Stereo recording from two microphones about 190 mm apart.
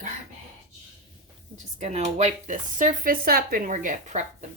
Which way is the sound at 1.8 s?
35° right (ahead or behind).